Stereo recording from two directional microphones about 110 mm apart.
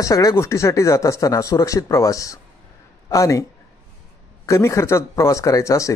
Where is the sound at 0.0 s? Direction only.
30° left (ahead or behind).